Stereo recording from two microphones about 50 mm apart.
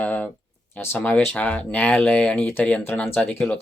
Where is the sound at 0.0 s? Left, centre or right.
Left.